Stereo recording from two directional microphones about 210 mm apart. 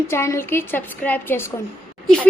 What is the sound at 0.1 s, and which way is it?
Speech, 10° left (ahead or behind).